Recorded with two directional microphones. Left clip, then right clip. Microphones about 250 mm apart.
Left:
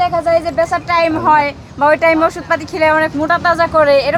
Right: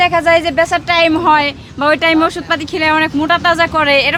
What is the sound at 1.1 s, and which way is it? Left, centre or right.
Speech, right.